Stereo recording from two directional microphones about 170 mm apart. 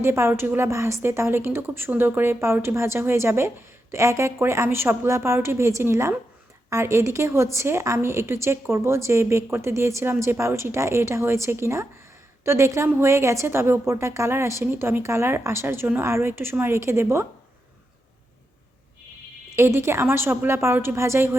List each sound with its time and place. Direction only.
0.0 s a woman's voice: 15° right (ahead or behind)
19.5 s a woman's voice: 15° right (ahead or behind)